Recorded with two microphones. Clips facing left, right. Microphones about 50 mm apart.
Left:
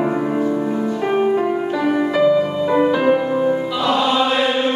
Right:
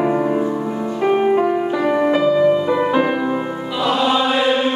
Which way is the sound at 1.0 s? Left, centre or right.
Centre.